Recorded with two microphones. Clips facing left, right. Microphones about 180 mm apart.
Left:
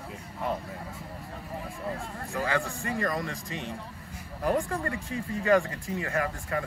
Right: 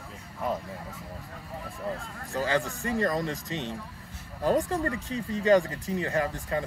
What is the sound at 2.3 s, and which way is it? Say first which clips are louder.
A man's voice: right 2 dB; 30° right (ahead or behind).